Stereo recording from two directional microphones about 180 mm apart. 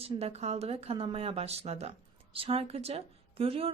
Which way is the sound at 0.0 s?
35° right (ahead or behind).